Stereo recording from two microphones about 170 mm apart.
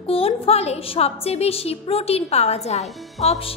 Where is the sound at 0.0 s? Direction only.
35° left (ahead or behind).